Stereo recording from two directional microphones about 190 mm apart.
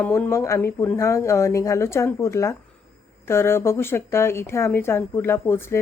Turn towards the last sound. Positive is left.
turn(degrees=10)  # may be behind; listen again after turning